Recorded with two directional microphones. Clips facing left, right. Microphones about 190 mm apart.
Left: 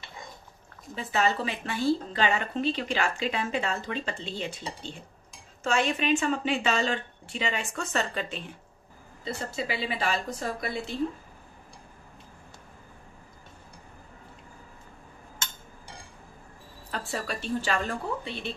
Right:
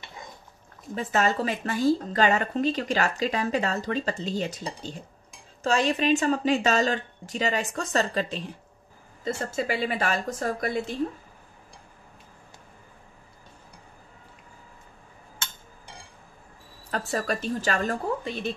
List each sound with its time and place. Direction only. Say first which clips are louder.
0.9 s a woman's voice: right 2 dB; 45° right (ahead or behind)
17.1 s a woman's voice: right 3 dB; 45° right (ahead or behind)